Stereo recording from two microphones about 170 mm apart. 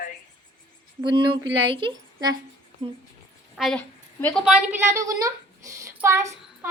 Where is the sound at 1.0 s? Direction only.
30° right (ahead or behind).